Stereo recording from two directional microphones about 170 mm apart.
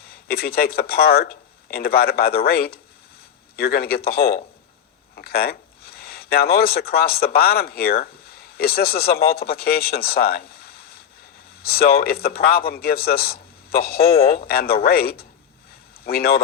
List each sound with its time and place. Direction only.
0.1 s a man's voice: 65° left (ahead or behind)
14.0 s speech: 35° left (ahead or behind)
14.3 s speech: 60° left (ahead or behind)